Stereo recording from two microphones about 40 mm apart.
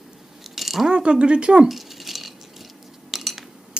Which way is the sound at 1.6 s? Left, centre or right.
Centre.